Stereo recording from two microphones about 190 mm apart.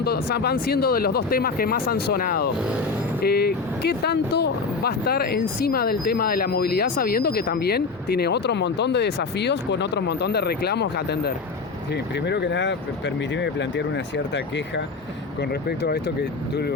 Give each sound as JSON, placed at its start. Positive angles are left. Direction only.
{"t": 0.0, "sound": "speech", "side_deg": 55}